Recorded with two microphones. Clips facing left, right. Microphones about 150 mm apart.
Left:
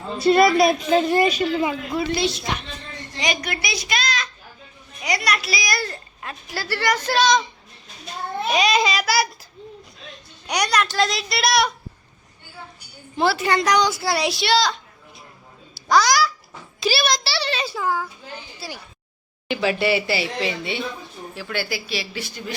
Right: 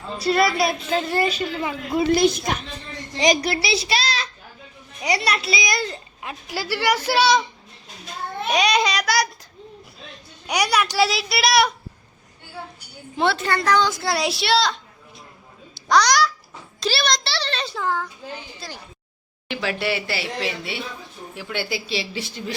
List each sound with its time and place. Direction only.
0.2 s a woman's voice: 25° left (ahead or behind)
2.1 s a woman's voice: 45° right (ahead or behind)
3.2 s a woman's voice: 35° right (ahead or behind); by 7.4 s 10° right (ahead or behind)
8.4 s speech: centre (ahead or behind)
10.4 s speech: 5° right (ahead or behind)
13.1 s a woman's voice: 5° left (ahead or behind)
14.0 s speech: centre (ahead or behind)
15.7 s a sound: centre (ahead or behind)
16.8 s a child's voice: 5° left (ahead or behind)
21.3 s a woman's voice: 20° right (ahead or behind)